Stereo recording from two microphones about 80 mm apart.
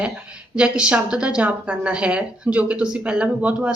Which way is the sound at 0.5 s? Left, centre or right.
Centre.